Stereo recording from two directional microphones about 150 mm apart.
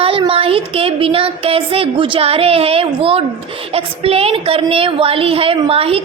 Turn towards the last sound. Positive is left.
turn(degrees=-40)  # may be behind; listen again after turning